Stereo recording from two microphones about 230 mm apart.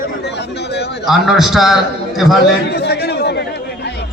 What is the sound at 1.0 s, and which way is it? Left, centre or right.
Music, centre.